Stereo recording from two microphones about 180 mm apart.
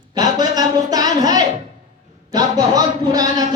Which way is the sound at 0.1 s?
20° right (ahead or behind).